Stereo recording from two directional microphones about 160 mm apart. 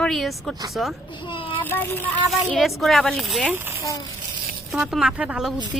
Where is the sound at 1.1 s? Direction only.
30° left (ahead or behind).